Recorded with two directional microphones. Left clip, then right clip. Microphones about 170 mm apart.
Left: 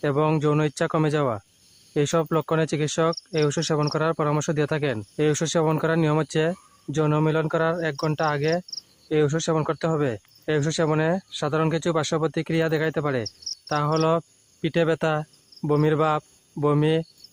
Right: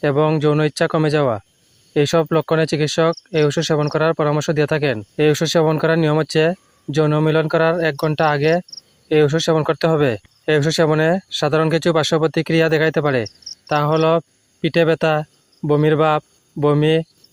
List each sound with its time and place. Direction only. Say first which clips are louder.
0.0 s speech: right 6 dB; 30° right (ahead or behind)